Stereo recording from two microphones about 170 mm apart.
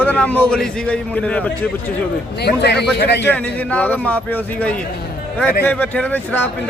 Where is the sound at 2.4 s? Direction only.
80° left.